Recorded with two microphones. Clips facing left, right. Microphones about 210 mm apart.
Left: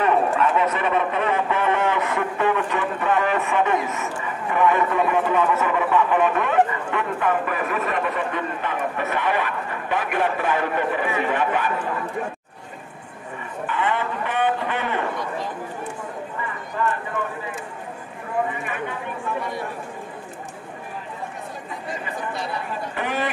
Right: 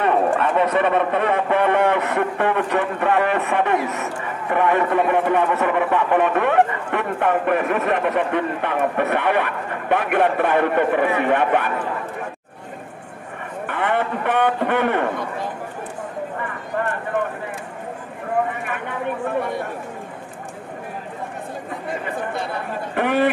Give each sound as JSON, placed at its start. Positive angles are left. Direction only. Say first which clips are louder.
{"t": 0.7, "sound": "a man's voice", "louder": "right 4 dB", "side_deg": -60}
{"t": 13.7, "sound": "a man's voice", "louder": "right 3 dB", "side_deg": -60}
{"t": 16.3, "sound": "clip-clop", "louder": "even", "side_deg": -55}
{"t": 18.7, "sound": "a man's voice", "louder": "right 3 dB", "side_deg": -60}
{"t": 22.0, "sound": "a man's voice", "louder": "right 3 dB", "side_deg": -55}